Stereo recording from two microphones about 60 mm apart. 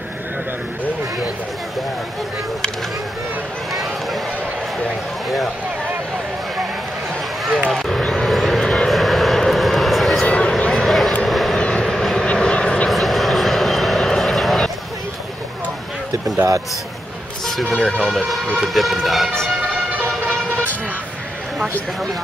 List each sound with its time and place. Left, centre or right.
3.7 s run: centre
7.7 s vehicle: centre
10.2 s a sound: centre
10.7 s vehicle: centre
11.5 s vehicle: centre
12.9 s vehicle: centre
17.5 s a sound: centre
17.7 s speech: centre
18.6 s speech: centre